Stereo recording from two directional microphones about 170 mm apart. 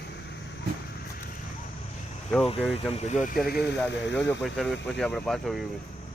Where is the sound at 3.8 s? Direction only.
90° left.